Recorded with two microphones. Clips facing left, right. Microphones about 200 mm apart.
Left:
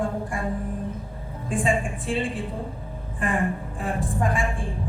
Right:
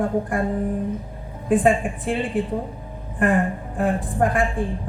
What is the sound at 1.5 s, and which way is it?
Speech, 60° right (ahead or behind).